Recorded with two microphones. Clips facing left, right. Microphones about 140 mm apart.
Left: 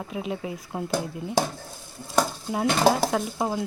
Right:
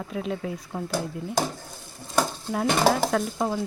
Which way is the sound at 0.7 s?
20° left (ahead or behind).